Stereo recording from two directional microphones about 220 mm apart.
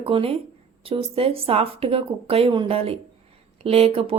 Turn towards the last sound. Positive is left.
turn(degrees=-25)  # may be behind; listen again after turning